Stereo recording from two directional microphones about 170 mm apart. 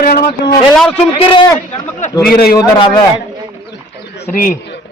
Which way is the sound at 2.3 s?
65° left (ahead or behind).